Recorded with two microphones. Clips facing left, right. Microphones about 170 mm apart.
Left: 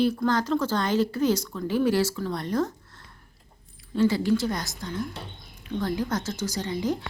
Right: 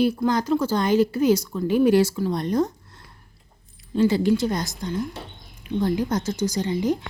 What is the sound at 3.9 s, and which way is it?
A woman's voice, 20° right (ahead or behind).